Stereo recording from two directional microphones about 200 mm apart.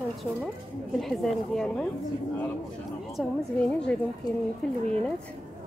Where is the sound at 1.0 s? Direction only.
Centre (ahead or behind).